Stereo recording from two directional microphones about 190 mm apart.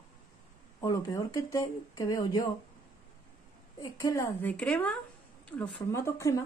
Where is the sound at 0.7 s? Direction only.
20° left (ahead or behind).